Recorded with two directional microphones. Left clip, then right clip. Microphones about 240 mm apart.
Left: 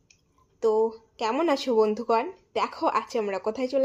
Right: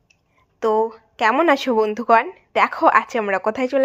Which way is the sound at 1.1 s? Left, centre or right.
Centre.